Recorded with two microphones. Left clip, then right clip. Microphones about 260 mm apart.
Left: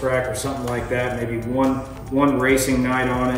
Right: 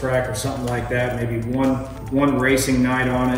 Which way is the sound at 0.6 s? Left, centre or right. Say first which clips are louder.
Right 1 dB; centre.